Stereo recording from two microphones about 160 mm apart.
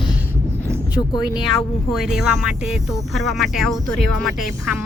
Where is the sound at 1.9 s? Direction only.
Centre (ahead or behind).